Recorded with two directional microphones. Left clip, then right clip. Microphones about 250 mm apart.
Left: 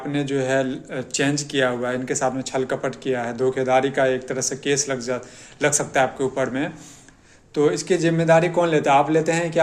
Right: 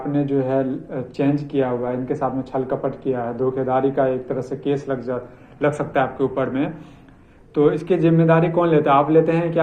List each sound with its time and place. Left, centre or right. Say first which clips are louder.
0.1 s a man's voice: right 1 dB; left